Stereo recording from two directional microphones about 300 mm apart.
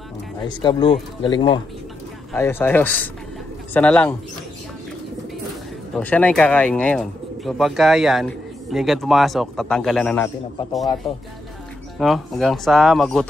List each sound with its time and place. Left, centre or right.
0.4 s speech: centre
5.9 s speech: centre
12.0 s speech: centre